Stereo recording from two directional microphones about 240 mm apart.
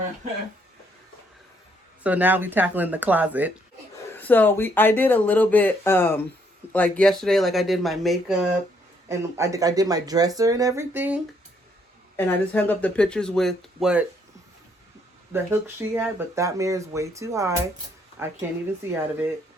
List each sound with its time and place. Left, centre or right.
2.0 s speech: centre
4.1 s speech: centre
9.0 s speech: centre
12.1 s speech: centre
15.3 s speech: centre